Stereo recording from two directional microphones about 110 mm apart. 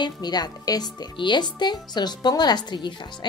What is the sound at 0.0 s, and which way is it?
A woman's voice, 40° left (ahead or behind).